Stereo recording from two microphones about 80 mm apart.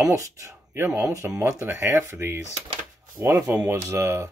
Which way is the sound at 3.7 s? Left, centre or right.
Right.